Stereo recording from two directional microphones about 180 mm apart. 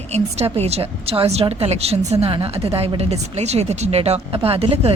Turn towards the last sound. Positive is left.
turn(degrees=-30)  # may be behind; listen again after turning